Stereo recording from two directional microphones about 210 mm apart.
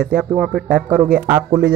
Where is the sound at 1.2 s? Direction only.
15° right (ahead or behind).